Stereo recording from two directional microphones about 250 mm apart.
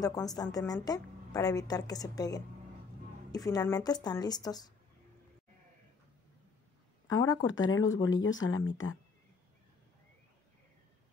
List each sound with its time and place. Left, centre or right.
0.0 s a woman's voice: centre
7.1 s speech: left